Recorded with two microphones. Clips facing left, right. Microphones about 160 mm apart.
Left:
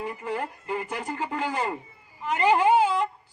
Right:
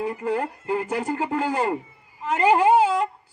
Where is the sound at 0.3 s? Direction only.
35° right (ahead or behind).